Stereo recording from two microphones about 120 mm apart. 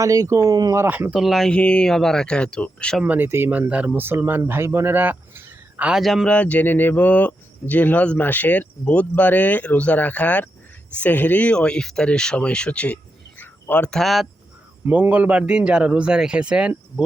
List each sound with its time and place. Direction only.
0.0 s speech: 30° right (ahead or behind)
0.8 s speech: 15° right (ahead or behind)
1.1 s speech: centre (ahead or behind)
3.0 s speech: 15° right (ahead or behind)
6.0 s speech: centre (ahead or behind)
6.2 s speech: 10° left (ahead or behind)
14.8 s speech: 15° right (ahead or behind)